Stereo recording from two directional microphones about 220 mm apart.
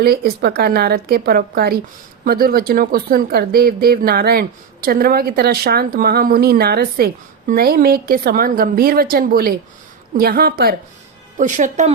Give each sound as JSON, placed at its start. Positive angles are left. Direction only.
{"t": 0.0, "sound": "a woman's voice", "side_deg": -45}